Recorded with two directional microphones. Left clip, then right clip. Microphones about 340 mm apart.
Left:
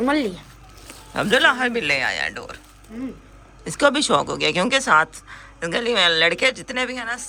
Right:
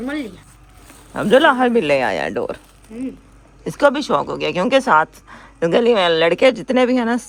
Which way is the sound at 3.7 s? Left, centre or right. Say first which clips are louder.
Right 2 dB; centre.